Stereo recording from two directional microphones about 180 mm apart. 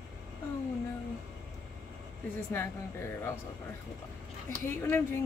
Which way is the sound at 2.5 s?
15° left (ahead or behind).